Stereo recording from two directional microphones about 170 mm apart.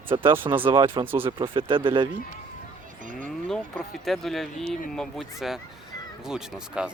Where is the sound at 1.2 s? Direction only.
30° right (ahead or behind).